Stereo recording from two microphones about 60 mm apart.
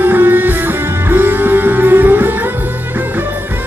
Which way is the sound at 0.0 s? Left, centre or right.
Right.